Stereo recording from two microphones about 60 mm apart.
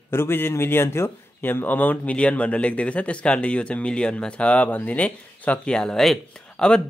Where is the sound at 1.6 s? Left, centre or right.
Left.